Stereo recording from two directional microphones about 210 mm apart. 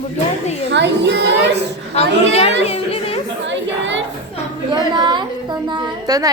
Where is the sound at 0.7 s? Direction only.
55° right (ahead or behind).